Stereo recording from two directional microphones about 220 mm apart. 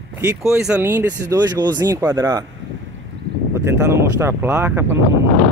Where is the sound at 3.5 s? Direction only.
10° right (ahead or behind).